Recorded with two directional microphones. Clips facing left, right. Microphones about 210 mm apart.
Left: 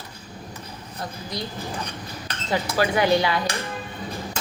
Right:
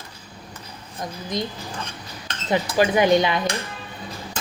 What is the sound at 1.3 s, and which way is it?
A woman's voice, 20° right (ahead or behind).